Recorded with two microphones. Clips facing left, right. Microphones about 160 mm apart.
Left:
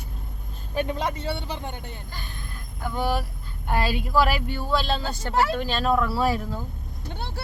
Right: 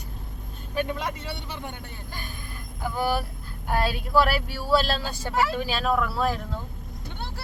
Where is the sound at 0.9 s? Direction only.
30° left (ahead or behind).